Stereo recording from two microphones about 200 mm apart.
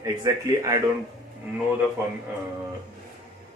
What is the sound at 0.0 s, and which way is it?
Speech, 15° right (ahead or behind).